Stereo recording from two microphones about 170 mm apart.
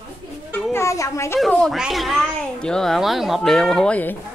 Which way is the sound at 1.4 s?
Centre (ahead or behind).